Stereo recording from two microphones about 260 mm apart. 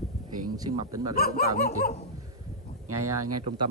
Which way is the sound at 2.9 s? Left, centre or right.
Right.